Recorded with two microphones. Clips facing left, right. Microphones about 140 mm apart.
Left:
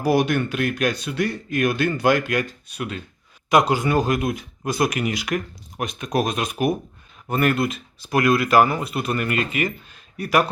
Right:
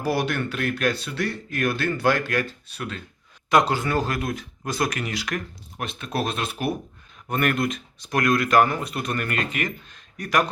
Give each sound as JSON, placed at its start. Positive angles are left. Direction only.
{"t": 0.0, "sound": "speech", "side_deg": 15}
{"t": 7.3, "sound": "speech", "side_deg": 5}